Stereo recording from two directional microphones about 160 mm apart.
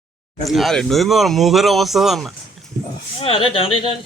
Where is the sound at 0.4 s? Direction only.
Centre (ahead or behind).